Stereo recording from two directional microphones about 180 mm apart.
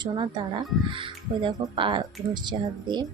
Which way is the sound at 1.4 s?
25° right (ahead or behind).